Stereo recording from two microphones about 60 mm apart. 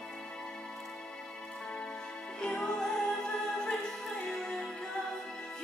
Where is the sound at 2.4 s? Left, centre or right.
Centre.